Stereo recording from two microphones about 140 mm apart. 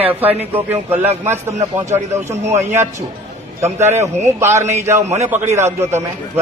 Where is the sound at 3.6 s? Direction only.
15° right (ahead or behind).